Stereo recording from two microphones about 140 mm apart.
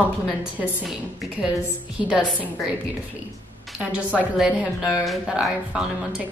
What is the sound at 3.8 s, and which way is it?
A woman's voice, 10° right (ahead or behind).